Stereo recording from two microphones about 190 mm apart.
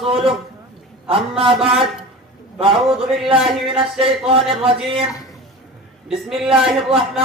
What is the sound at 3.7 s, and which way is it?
A man's voice, 30° right (ahead or behind).